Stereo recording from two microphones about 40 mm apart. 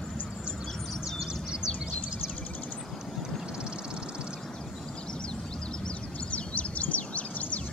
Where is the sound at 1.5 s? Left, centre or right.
Centre.